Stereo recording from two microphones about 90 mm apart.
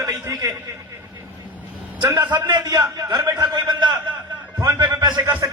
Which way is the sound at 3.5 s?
60° right (ahead or behind).